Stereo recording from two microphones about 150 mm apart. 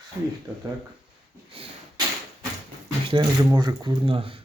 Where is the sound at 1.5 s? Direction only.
40° right (ahead or behind).